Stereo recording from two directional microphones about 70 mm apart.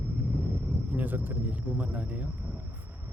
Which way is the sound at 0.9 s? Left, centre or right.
Right.